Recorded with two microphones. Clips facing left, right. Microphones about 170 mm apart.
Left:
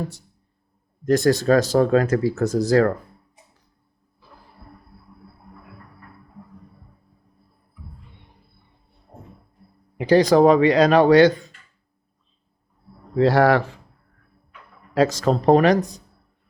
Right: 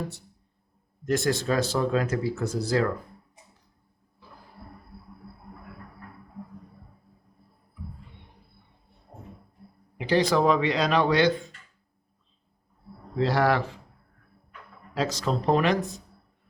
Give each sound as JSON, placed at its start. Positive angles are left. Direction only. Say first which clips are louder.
{"t": 1.0, "sound": "speech", "louder": "left 8 dB", "side_deg": 40}
{"t": 10.0, "sound": "speech", "louder": "left 8 dB", "side_deg": 45}
{"t": 13.1, "sound": "speech", "louder": "left 8 dB", "side_deg": 50}
{"t": 14.9, "sound": "speech", "louder": "left 8 dB", "side_deg": 50}